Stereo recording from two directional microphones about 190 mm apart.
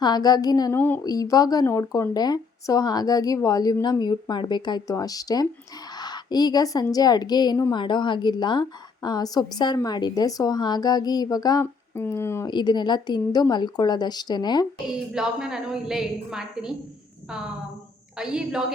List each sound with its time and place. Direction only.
0.0 s a woman's voice: 20° left (ahead or behind)
14.8 s a woman's voice: 5° right (ahead or behind)